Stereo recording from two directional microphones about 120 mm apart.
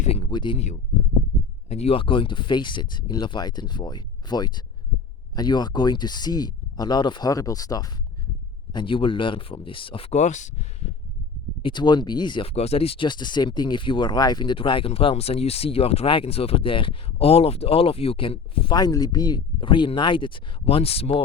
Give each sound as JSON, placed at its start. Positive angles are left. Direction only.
{"t": 0.0, "sound": "a sound", "side_deg": 55}
{"t": 0.3, "sound": "speech", "side_deg": 40}
{"t": 1.7, "sound": "speech", "side_deg": 55}
{"t": 8.7, "sound": "speech", "side_deg": 45}
{"t": 10.1, "sound": "speech", "side_deg": 75}
{"t": 11.6, "sound": "speech", "side_deg": 40}
{"t": 12.5, "sound": "speech", "side_deg": 60}
{"t": 18.8, "sound": "speech", "side_deg": 35}